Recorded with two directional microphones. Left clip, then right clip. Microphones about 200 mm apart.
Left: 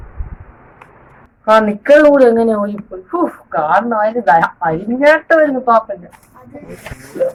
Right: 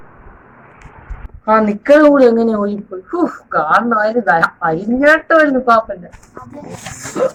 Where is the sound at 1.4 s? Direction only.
Centre (ahead or behind).